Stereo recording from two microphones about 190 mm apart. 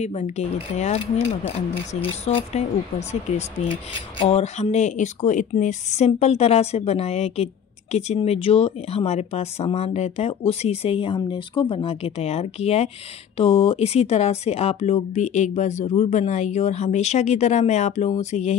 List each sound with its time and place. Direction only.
0.0 s speech: 35° left (ahead or behind)
2.2 s speech: 35° left (ahead or behind)